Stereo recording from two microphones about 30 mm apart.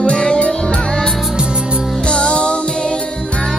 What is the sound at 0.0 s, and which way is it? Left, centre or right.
Music, left.